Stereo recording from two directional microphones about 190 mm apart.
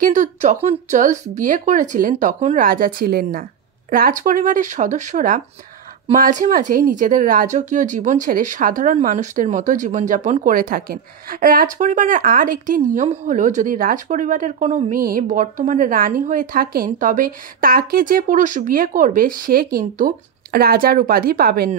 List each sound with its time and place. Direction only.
0.0 s speech: 40° right (ahead or behind)